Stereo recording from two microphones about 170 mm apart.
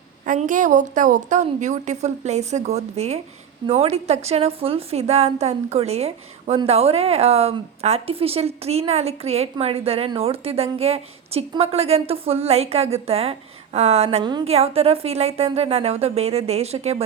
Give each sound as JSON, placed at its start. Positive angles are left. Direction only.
{"t": 0.3, "sound": "a woman's voice", "side_deg": -50}